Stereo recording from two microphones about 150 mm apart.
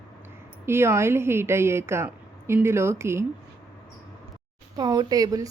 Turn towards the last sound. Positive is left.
turn(degrees=-25)  # may be behind; listen again after turning